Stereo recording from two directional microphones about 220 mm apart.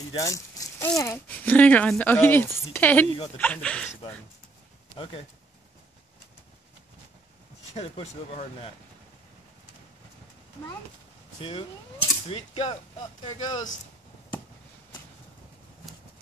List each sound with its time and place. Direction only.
0.1 s speech: 15° left (ahead or behind)
4.9 s speech: 25° left (ahead or behind)
7.7 s speech: 30° left (ahead or behind)
11.4 s speech: 25° left (ahead or behind)